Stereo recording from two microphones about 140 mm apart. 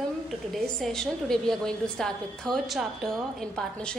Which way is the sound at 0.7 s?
5° left (ahead or behind).